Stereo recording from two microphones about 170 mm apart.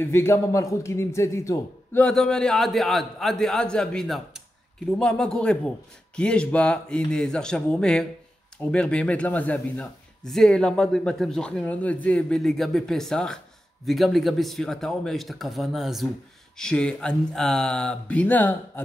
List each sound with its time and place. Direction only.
0.0 s a man's voice: 15° left (ahead or behind)
2.0 s speech: 5° left (ahead or behind)